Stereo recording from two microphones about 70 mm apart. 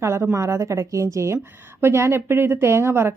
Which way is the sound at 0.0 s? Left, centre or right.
Right.